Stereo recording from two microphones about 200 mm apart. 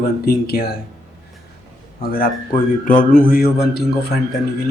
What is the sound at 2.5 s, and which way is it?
Speech, 40° left (ahead or behind).